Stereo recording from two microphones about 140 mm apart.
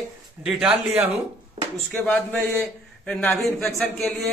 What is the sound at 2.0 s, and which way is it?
A man's voice, 10° left (ahead or behind).